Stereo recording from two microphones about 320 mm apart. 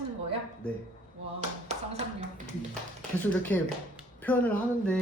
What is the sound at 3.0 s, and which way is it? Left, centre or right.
Speech, centre.